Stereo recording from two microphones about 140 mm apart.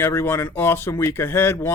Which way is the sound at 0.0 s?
20° left (ahead or behind).